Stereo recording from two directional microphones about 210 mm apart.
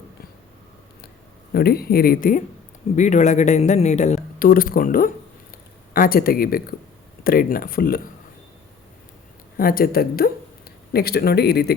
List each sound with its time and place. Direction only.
1.5 s speech: 45° left (ahead or behind)
9.6 s speech: 45° left (ahead or behind)